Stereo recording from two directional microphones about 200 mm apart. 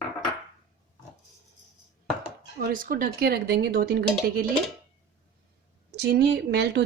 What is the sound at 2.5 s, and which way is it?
Speech, 45° right (ahead or behind).